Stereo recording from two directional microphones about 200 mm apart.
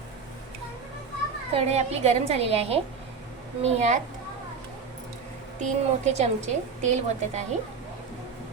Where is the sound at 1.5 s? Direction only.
30° right (ahead or behind).